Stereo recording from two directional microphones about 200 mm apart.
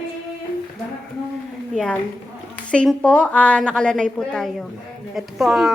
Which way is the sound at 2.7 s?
5° left (ahead or behind).